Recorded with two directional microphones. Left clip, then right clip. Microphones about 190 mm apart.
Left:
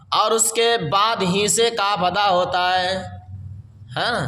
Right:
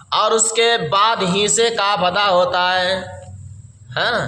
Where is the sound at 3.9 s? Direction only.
45° left (ahead or behind).